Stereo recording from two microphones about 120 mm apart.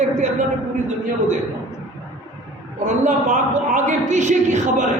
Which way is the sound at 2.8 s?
85° right.